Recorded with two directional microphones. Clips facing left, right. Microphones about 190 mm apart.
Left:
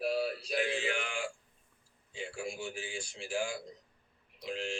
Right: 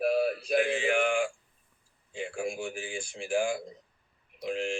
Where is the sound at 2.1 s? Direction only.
50° right (ahead or behind).